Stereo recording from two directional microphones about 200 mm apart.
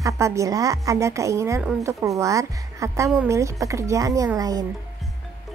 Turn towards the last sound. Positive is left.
turn(degrees=-20)  # may be behind; listen again after turning